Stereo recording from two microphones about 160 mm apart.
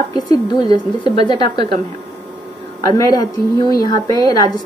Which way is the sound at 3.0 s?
20° left (ahead or behind).